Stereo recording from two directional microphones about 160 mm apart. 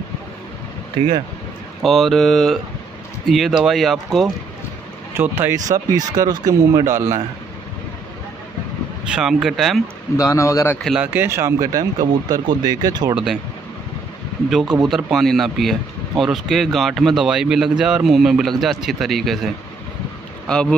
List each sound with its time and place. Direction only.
1.8 s speech: centre (ahead or behind)
5.1 s speech: 15° right (ahead or behind)
9.1 s speech: 5° right (ahead or behind)
10.1 s speech: 20° left (ahead or behind)
10.8 s speech: centre (ahead or behind)
11.1 s speech: 15° right (ahead or behind)
13.1 s speech: centre (ahead or behind)
14.5 s speech: centre (ahead or behind)